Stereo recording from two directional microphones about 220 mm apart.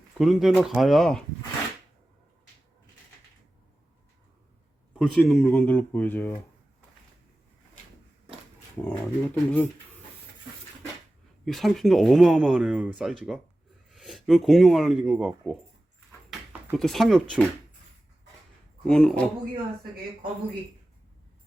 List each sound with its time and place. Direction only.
0.2 s speech: centre (ahead or behind)
4.9 s speech: centre (ahead or behind)
8.8 s speech: 5° left (ahead or behind)
11.4 s speech: centre (ahead or behind)
18.9 s speech: 5° left (ahead or behind)